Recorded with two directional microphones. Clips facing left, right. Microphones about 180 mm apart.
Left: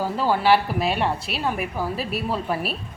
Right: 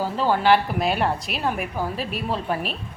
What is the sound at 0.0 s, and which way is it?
A woman's voice, 10° left (ahead or behind).